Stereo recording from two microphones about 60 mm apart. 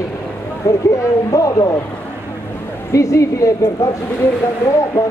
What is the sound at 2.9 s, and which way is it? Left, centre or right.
Speech, left.